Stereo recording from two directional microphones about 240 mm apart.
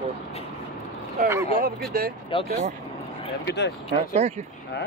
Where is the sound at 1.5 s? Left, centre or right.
Right.